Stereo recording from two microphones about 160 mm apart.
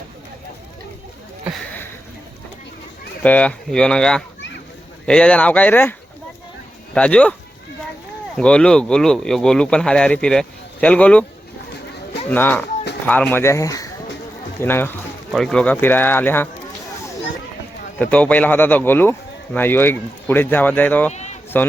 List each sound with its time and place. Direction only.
3.2 s speech: 10° left (ahead or behind)
6.9 s speech: 5° left (ahead or behind)
8.4 s speech: 5° left (ahead or behind)
12.3 s speech: 10° left (ahead or behind)
15.3 s speech: centre (ahead or behind)
18.0 s speech: 10° left (ahead or behind)
21.1 s a sound: 45° left (ahead or behind)
21.5 s speech: 10° left (ahead or behind)